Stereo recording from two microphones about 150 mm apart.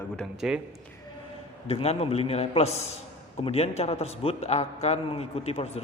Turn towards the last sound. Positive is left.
turn(degrees=40)  # may be behind; listen again after turning